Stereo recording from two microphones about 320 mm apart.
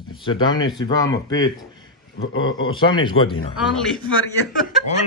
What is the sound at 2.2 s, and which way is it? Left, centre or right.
Speech, left.